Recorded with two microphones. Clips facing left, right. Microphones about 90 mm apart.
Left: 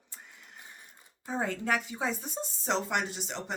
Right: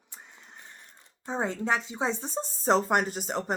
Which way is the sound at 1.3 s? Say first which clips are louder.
Right 2 dB; 25° right (ahead or behind).